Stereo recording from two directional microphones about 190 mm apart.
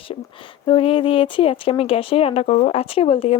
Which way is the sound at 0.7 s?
30° left (ahead or behind).